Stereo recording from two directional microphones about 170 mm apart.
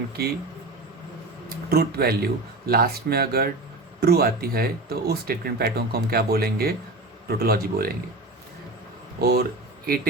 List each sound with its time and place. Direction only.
0.2 s speech: 65° right (ahead or behind)
1.7 s speech: 65° right (ahead or behind)
9.2 s speech: 65° right (ahead or behind)